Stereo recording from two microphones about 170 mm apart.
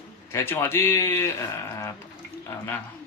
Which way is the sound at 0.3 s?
15° left (ahead or behind).